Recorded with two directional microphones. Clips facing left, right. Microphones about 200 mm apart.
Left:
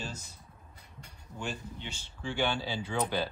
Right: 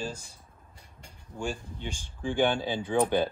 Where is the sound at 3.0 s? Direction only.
20° right (ahead or behind).